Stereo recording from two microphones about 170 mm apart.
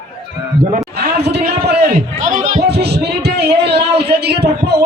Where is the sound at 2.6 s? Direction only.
75° right (ahead or behind).